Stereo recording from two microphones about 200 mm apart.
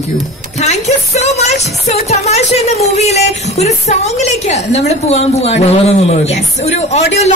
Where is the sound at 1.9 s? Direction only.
35° left (ahead or behind).